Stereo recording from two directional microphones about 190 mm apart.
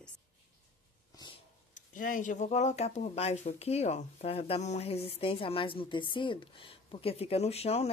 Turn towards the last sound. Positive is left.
turn(degrees=35)  # may be behind; listen again after turning